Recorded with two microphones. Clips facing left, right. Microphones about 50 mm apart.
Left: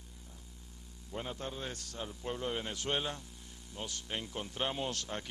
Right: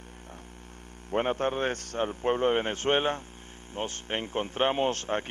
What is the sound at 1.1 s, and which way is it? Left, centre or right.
A man's voice, right.